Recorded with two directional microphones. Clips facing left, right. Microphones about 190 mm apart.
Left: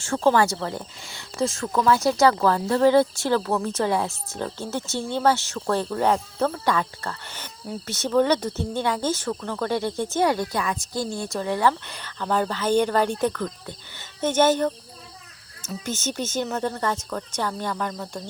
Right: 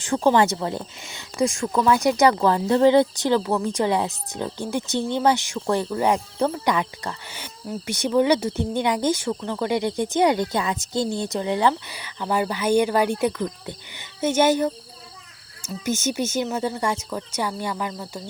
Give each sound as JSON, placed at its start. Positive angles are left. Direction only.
{"t": 0.0, "sound": "speech", "side_deg": -15}
{"t": 11.7, "sound": "speech", "side_deg": -10}